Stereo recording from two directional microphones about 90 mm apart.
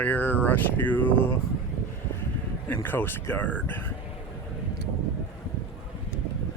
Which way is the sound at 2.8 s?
25° left (ahead or behind).